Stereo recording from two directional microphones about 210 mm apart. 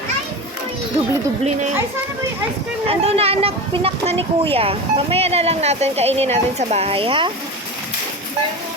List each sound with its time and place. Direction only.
2.8 s speech: 30° right (ahead or behind)